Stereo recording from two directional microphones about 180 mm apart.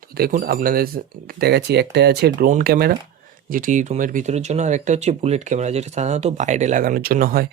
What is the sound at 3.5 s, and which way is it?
Speech, 45° right (ahead or behind).